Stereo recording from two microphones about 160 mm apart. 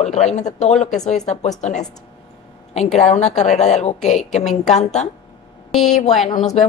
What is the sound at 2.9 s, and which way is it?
A woman's voice, 45° left (ahead or behind).